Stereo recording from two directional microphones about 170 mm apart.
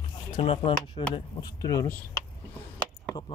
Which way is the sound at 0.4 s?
35° left (ahead or behind).